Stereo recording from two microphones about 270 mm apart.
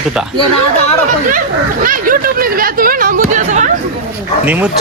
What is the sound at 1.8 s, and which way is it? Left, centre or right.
Speech, right.